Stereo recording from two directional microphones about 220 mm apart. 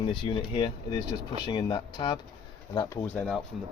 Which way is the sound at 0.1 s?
20° left (ahead or behind).